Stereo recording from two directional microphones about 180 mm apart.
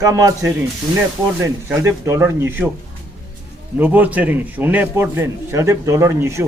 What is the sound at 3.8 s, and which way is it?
A man's voice, 10° right (ahead or behind).